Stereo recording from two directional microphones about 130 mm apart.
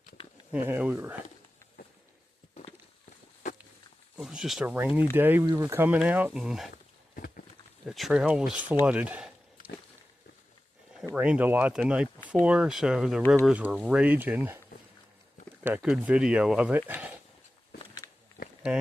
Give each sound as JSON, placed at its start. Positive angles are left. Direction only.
{"t": 0.5, "sound": "speech", "side_deg": -15}
{"t": 4.2, "sound": "speech", "side_deg": 0}
{"t": 7.9, "sound": "speech", "side_deg": 0}
{"t": 11.1, "sound": "speech", "side_deg": -10}
{"t": 15.6, "sound": "speech", "side_deg": -10}